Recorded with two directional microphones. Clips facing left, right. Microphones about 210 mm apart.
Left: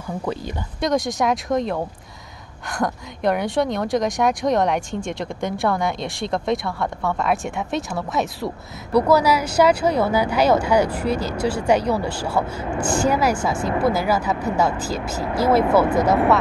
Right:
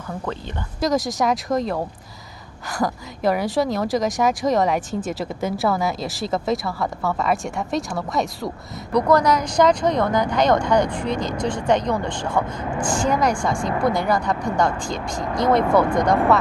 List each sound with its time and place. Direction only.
0.0 s speech: 10° left (ahead or behind)
0.7 s a woman's voice: centre (ahead or behind)